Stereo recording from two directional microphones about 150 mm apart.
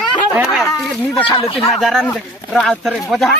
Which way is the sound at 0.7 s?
20° left (ahead or behind).